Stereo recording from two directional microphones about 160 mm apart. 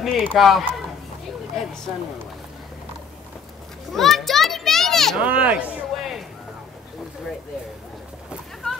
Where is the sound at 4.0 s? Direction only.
Centre (ahead or behind).